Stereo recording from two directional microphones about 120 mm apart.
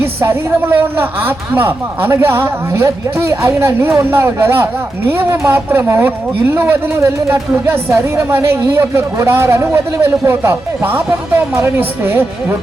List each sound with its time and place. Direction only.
0.0 s a woman's voice: 20° right (ahead or behind)